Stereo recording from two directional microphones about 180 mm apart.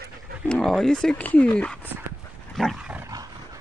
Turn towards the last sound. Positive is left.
turn(degrees=-5)  # may be behind; listen again after turning